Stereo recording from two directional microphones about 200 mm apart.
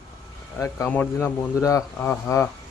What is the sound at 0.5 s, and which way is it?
Speech, 15° left (ahead or behind).